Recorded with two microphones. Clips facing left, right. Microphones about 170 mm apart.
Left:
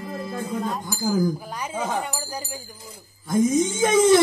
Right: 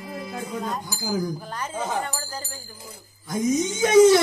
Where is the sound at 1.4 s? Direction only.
10° left (ahead or behind).